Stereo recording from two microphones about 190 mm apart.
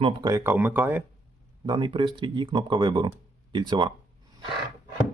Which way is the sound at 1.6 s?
25° right (ahead or behind).